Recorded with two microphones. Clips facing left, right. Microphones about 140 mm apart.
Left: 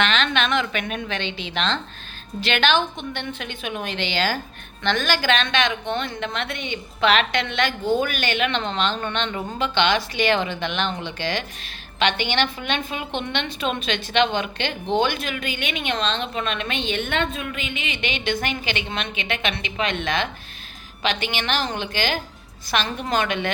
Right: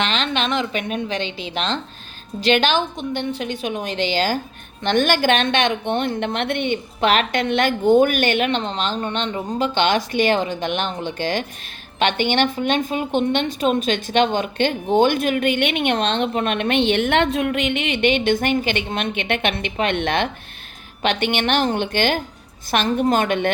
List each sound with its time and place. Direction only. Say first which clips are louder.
0.0 s a woman's voice: even; 35° right (ahead or behind); by 8.4 s 50° right (ahead or behind)
8.4 s a woman's voice: right 1 dB; 35° right (ahead or behind)